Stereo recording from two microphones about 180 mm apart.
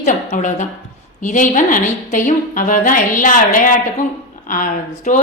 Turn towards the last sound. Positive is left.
turn(degrees=45)  # may be behind; listen again after turning